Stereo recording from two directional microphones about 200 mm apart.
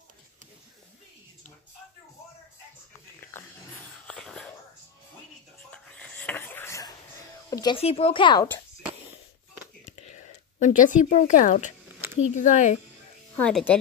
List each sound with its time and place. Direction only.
3.3 s dog: 10° left (ahead or behind)
4.1 s whispering: 5° left (ahead or behind)
5.7 s a sound: 5° left (ahead or behind)
7.4 s speech: 20° left (ahead or behind)
10.0 s a woman's voice: 35° left (ahead or behind)
13.4 s speech: 5° left (ahead or behind)